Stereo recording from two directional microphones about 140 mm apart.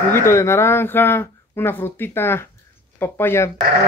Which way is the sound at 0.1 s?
20° left (ahead or behind).